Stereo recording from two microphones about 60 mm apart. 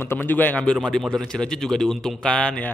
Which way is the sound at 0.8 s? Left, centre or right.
Centre.